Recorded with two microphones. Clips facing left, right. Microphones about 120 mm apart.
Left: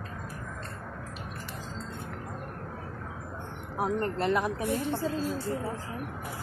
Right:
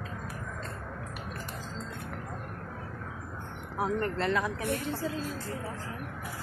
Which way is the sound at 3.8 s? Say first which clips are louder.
Left 1 dB; 25° left (ahead or behind).